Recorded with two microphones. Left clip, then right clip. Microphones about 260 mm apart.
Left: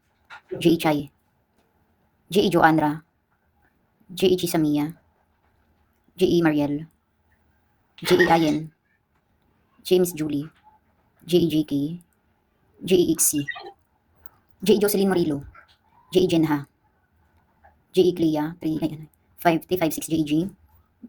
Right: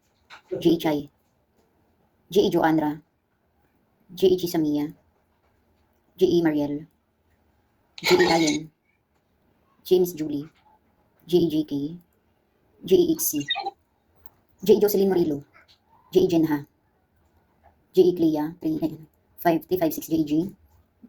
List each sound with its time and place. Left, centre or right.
0.6 s a woman's voice: left
2.3 s a woman's voice: left
4.2 s a woman's voice: left
6.1 s a woman's voice: left
8.2 s a woman's voice: left
10.2 s a woman's voice: left
14.6 s a woman's voice: left
17.9 s a woman's voice: left